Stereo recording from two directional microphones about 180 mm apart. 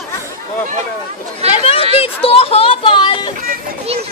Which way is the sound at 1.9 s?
30° left (ahead or behind).